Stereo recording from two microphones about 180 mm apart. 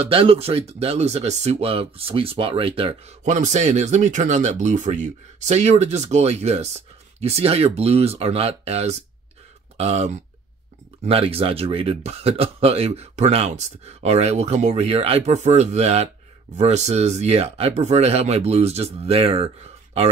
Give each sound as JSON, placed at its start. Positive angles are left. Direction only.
{"t": 0.0, "sound": "speech", "side_deg": -30}